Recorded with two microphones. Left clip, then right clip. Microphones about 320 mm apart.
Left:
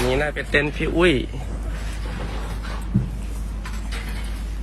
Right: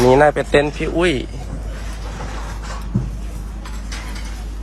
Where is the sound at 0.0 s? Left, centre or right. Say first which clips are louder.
Right 11 dB; right.